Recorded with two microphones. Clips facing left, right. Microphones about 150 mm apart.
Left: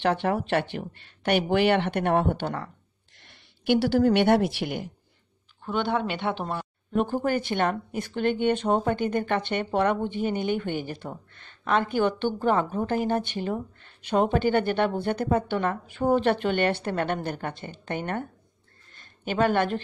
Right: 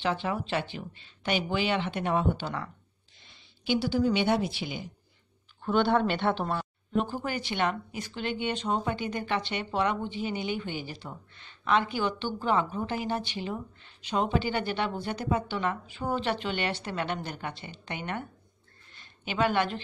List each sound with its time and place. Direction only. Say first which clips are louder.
0.0 s a woman's voice: left 5 dB; 60° left (ahead or behind)
5.7 s speech: right 2 dB; 10° left (ahead or behind)
7.0 s a woman's voice: left 6 dB; 55° left (ahead or behind)